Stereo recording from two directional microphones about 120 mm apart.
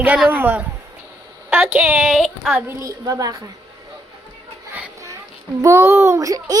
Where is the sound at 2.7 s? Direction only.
25° right (ahead or behind).